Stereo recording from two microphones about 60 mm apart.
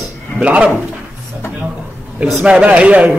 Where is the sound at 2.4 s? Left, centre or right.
Centre.